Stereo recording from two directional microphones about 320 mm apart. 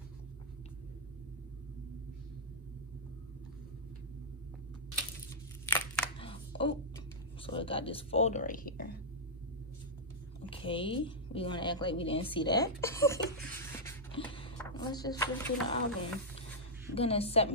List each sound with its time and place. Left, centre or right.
6.1 s a sound: centre
7.4 s speech: centre
10.5 s a woman's voice: centre